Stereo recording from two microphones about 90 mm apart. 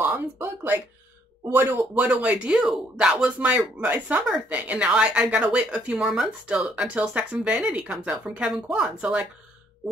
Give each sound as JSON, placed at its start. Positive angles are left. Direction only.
{"t": 0.0, "sound": "speech", "side_deg": -25}
{"t": 2.0, "sound": "speech", "side_deg": -10}